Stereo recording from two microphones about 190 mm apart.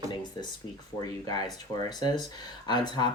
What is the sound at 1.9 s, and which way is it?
Speech, 20° left (ahead or behind).